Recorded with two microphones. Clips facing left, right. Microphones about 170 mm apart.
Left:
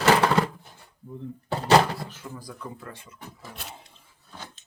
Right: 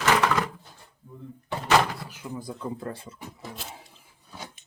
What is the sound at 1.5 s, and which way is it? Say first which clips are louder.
Door: left 3 dB; 35° left (ahead or behind).